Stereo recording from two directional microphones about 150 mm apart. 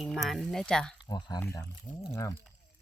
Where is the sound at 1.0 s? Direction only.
25° left (ahead or behind).